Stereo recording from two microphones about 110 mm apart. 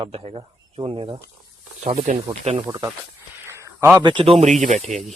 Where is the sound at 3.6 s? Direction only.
25° right (ahead or behind).